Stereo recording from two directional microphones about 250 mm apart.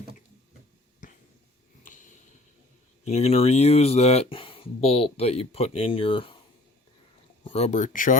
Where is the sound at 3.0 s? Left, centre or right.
Left.